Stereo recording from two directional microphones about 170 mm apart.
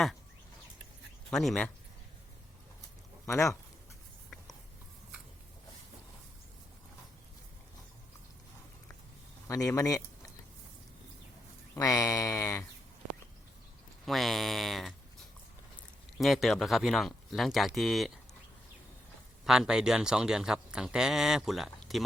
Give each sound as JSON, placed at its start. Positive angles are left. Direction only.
{"t": 1.3, "sound": "speech", "side_deg": 0}
{"t": 3.2, "sound": "speech", "side_deg": 20}
{"t": 9.5, "sound": "speech", "side_deg": 20}
{"t": 11.7, "sound": "speech", "side_deg": 20}
{"t": 14.0, "sound": "speech", "side_deg": 0}
{"t": 16.1, "sound": "speech", "side_deg": 0}
{"t": 19.5, "sound": "speech", "side_deg": -5}